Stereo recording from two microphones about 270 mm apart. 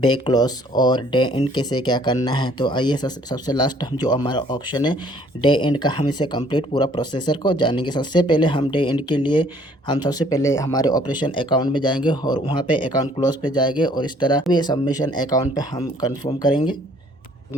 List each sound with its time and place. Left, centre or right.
0.0 s speech: centre